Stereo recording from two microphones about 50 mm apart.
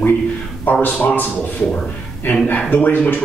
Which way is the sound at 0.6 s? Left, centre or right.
Left.